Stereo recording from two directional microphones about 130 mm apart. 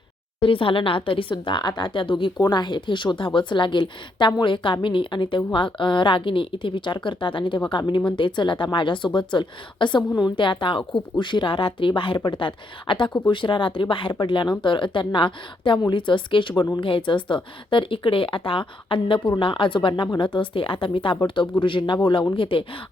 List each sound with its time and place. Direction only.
0.3 s speech: 40° left (ahead or behind)